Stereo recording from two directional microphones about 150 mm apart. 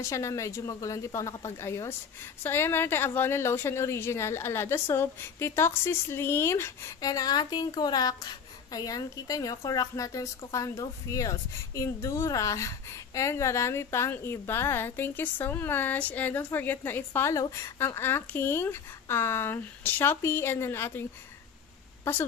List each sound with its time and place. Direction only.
0.0 s speech: 20° left (ahead or behind)